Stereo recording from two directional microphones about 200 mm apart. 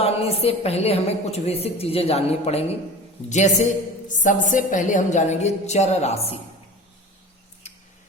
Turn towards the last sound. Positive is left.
turn(degrees=30)  # may be behind; listen again after turning